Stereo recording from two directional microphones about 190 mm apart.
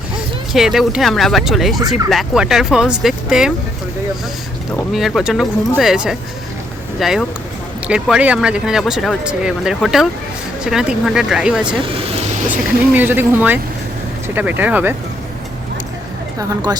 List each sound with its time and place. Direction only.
0.5 s speech: centre (ahead or behind)
4.9 s speech: centre (ahead or behind)
11.7 s vehicle: 30° right (ahead or behind)
12.5 s speech: 10° right (ahead or behind)